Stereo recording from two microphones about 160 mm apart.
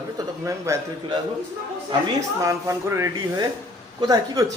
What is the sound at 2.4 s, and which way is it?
Speech, 20° right (ahead or behind).